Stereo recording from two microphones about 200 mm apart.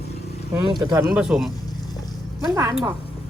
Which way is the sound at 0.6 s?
15° right (ahead or behind).